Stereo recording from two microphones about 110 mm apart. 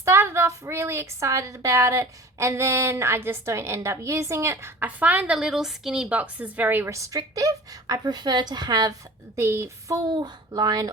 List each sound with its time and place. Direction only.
0.0 s a woman's voice: 25° right (ahead or behind); by 8.9 s 40° right (ahead or behind)
9.3 s a woman's voice: 25° right (ahead or behind)
10.1 s speech: 40° right (ahead or behind)